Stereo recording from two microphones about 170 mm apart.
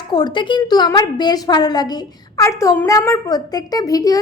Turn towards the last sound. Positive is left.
turn(degrees=20)  # may be behind; listen again after turning